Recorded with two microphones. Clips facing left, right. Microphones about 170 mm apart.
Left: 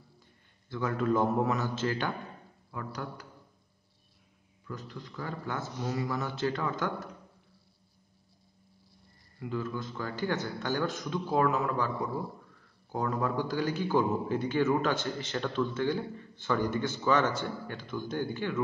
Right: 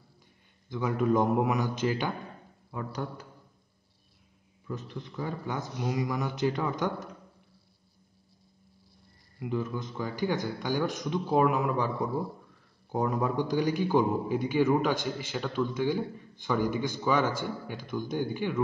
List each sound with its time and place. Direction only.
0.7 s a man's voice: 15° right (ahead or behind)
4.6 s a man's voice: 20° right (ahead or behind)
9.4 s a man's voice: 20° right (ahead or behind)
12.9 s a man's voice: 15° right (ahead or behind)